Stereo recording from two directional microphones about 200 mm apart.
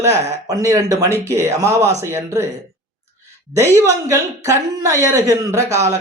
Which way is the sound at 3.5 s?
15° right (ahead or behind).